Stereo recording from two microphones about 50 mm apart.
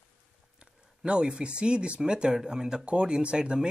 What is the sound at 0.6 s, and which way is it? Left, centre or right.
Speech, centre.